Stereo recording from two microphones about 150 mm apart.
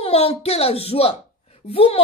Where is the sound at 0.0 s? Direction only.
40° left (ahead or behind).